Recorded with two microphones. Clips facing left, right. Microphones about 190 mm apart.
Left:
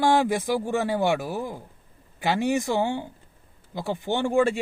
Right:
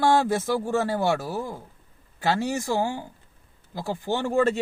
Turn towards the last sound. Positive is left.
turn(degrees=15)  # may be behind; listen again after turning